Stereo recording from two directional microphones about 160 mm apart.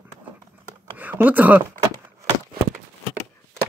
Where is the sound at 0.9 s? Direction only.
10° right (ahead or behind).